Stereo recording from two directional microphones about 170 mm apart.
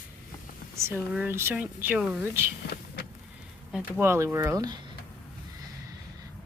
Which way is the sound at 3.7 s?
15° right (ahead or behind).